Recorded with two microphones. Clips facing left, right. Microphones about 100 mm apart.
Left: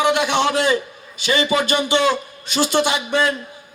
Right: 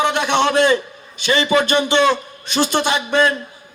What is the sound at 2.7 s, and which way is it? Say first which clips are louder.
Speech: left 2 dB; 50° right (ahead or behind).